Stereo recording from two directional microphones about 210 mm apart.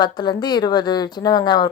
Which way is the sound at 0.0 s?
20° left (ahead or behind).